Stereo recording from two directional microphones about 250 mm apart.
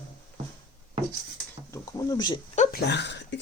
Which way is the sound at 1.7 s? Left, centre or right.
Centre.